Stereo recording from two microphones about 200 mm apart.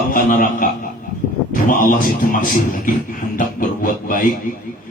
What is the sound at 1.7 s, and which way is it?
A man's voice, 40° left (ahead or behind).